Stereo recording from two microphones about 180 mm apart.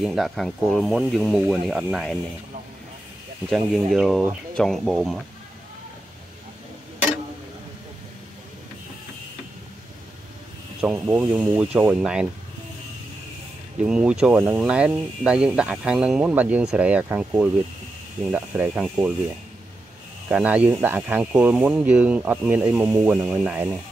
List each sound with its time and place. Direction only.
0.0 s speech: centre (ahead or behind)
3.4 s speech: centre (ahead or behind)
10.8 s speech: 5° right (ahead or behind)
13.8 s speech: 5° right (ahead or behind)
20.2 s speech: 5° right (ahead or behind)